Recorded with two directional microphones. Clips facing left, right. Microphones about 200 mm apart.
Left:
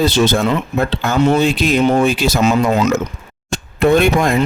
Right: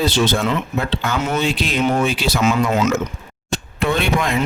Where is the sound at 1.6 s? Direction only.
45° left (ahead or behind).